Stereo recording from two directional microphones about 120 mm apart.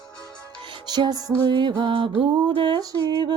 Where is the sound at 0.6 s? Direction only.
40° right (ahead or behind).